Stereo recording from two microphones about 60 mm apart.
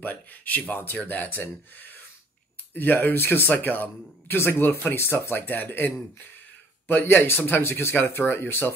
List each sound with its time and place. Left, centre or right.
0.0 s speech: left
2.7 s speech: left